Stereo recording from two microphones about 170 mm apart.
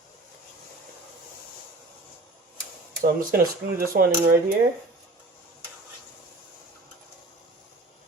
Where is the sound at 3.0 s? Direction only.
60° right (ahead or behind).